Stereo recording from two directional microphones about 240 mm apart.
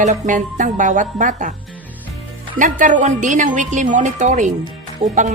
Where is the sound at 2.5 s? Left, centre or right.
Right.